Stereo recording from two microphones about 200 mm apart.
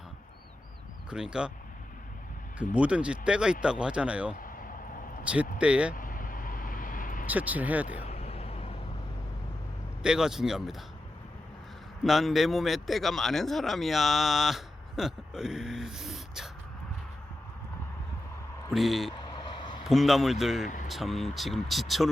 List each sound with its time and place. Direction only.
1.1 s speech: 5° right (ahead or behind)
2.7 s speech: 5° right (ahead or behind)
5.5 s speech: 5° right (ahead or behind)
5.9 s vehicle: 45° left (ahead or behind)
7.3 s speech: 10° right (ahead or behind)
8.0 s vehicle: 30° left (ahead or behind)
10.0 s speech: 5° right (ahead or behind)
12.0 s a man's voice: centre (ahead or behind)
18.7 s speech: centre (ahead or behind)